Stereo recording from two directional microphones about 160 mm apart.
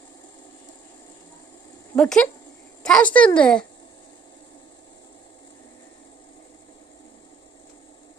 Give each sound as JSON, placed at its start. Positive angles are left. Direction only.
{"t": 2.0, "sound": "a woman's voice", "side_deg": 5}